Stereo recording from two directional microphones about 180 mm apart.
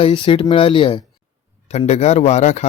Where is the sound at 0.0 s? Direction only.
30° left (ahead or behind).